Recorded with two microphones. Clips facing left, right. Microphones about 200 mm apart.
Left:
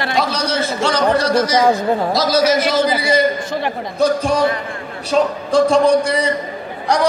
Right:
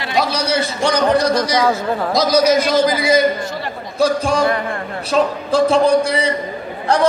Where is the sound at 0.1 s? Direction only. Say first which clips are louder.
Right 4 dB; 10° right (ahead or behind).